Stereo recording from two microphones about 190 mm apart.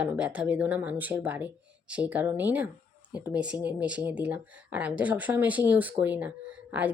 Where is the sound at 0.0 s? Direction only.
5° right (ahead or behind).